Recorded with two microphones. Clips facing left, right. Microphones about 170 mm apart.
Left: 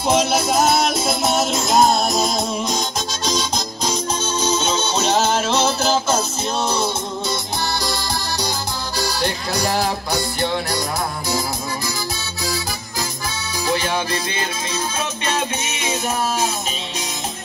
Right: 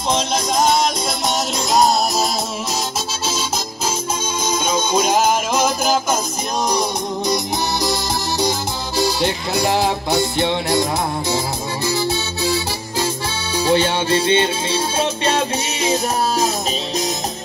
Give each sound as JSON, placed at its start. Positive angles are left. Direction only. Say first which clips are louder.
{"t": 0.1, "sound": "music", "louder": "left 2 dB", "side_deg": 5}
{"t": 3.3, "sound": "music", "louder": "left 3 dB", "side_deg": -5}
{"t": 13.7, "sound": "music", "louder": "right 5 dB", "side_deg": -30}